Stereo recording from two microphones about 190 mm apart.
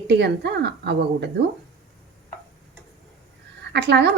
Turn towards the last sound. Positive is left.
turn(degrees=-65)  # may be behind; listen again after turning